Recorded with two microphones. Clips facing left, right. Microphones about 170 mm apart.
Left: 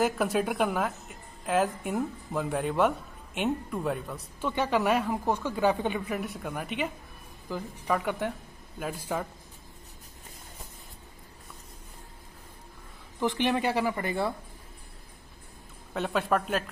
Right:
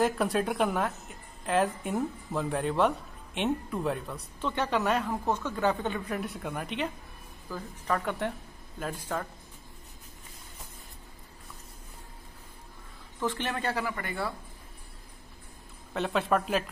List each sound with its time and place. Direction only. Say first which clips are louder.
0.0 s a woman's voice: even; centre (ahead or behind)
13.2 s a woman's voice: left 5 dB; 15° left (ahead or behind)
15.9 s a woman's voice: even; centre (ahead or behind)